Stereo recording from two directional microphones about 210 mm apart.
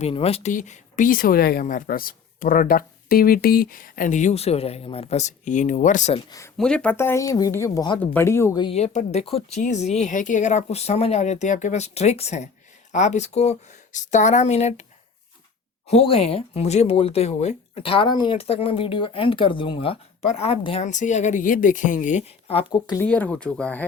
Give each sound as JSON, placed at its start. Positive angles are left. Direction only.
{"t": 0.0, "sound": "speech", "side_deg": 30}
{"t": 6.6, "sound": "speech", "side_deg": 5}
{"t": 8.6, "sound": "speech", "side_deg": 30}
{"t": 15.9, "sound": "speech", "side_deg": 30}
{"t": 23.0, "sound": "speech", "side_deg": 5}